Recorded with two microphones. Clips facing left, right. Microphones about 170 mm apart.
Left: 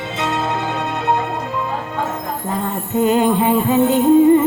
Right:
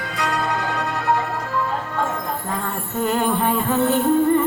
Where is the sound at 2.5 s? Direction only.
20° left (ahead or behind).